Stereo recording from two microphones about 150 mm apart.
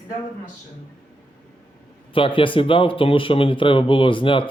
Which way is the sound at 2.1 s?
35° left (ahead or behind).